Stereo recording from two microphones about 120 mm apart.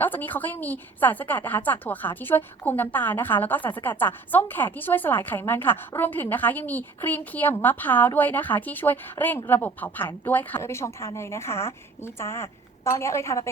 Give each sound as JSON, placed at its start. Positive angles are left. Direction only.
{"t": 0.0, "sound": "a woman's voice", "side_deg": 15}